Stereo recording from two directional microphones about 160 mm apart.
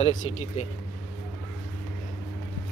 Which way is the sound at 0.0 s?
50° left (ahead or behind).